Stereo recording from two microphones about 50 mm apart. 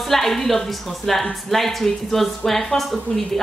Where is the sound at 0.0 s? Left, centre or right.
Centre.